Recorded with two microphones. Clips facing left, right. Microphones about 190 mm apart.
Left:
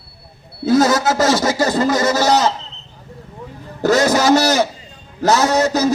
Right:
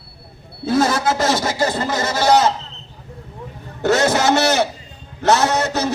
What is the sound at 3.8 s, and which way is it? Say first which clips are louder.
A man's voice: left 2 dB; 35° left (ahead or behind).